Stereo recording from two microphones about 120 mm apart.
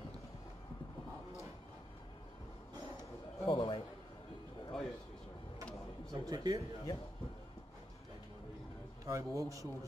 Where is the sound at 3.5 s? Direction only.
50° left (ahead or behind).